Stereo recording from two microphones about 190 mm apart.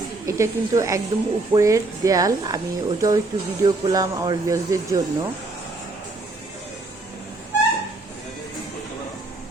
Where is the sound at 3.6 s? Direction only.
20° right (ahead or behind).